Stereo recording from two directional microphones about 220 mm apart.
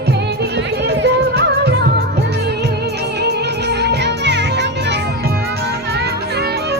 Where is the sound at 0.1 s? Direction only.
50° right (ahead or behind).